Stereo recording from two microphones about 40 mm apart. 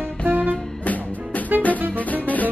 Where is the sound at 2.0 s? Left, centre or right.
Left.